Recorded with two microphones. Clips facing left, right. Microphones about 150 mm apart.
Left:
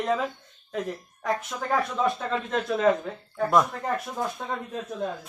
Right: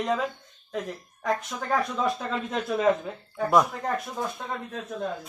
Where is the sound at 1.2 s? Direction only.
Centre (ahead or behind).